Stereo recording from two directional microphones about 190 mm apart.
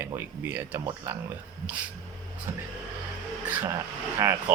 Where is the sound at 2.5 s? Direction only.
15° right (ahead or behind).